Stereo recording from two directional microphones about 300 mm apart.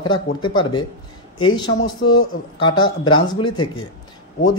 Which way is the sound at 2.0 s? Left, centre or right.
Left.